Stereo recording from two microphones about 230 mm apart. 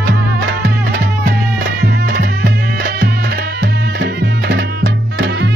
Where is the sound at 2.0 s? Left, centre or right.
Right.